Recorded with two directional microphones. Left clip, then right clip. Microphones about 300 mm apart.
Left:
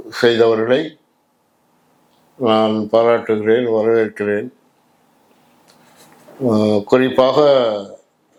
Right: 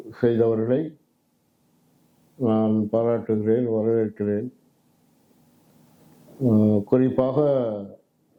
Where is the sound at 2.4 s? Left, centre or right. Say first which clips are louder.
Left 8 dB; centre.